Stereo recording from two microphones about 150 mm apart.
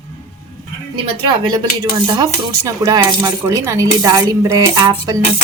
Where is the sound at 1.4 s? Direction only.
30° right (ahead or behind).